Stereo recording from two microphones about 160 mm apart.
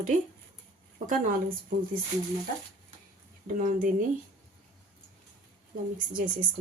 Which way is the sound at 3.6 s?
55° right (ahead or behind).